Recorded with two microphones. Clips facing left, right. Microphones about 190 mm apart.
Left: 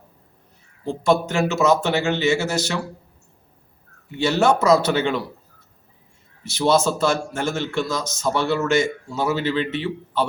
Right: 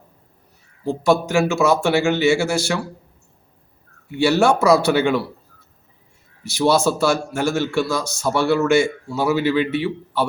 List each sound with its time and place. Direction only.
1.3 s a man's voice: 10° right (ahead or behind)
4.2 s a man's voice: 10° right (ahead or behind)
6.4 s a man's voice: 10° right (ahead or behind)